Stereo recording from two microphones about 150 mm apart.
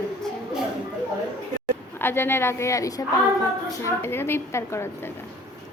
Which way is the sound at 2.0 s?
15° left (ahead or behind).